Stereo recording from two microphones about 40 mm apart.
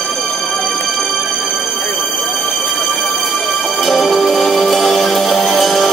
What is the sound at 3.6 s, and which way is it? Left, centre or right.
Music, centre.